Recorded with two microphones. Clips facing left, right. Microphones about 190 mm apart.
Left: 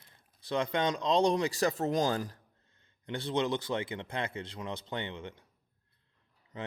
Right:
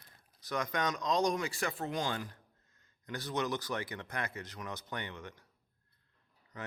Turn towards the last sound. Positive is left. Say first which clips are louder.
# left 4 dB
turn(degrees=25)  # may be behind; listen again after turning